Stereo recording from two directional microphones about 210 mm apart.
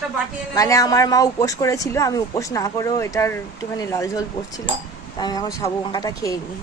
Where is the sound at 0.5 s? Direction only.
15° left (ahead or behind).